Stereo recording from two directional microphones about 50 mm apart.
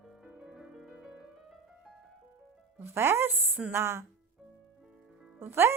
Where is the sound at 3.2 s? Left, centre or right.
Right.